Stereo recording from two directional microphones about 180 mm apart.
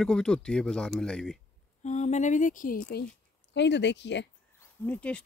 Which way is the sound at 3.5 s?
75° left (ahead or behind).